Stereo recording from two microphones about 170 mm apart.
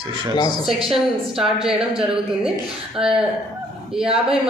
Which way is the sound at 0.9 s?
Centre (ahead or behind).